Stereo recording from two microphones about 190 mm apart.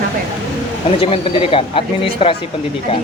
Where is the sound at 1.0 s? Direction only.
30° left (ahead or behind).